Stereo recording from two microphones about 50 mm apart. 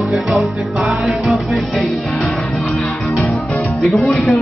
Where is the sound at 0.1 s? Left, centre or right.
Centre.